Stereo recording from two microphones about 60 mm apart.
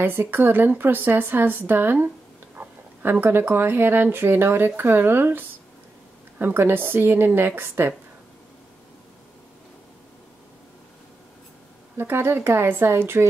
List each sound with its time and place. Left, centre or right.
0.0 s speech: right
12.0 s a woman's voice: right